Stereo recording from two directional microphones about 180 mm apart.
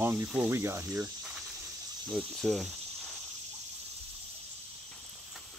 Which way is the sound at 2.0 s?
Centre (ahead or behind).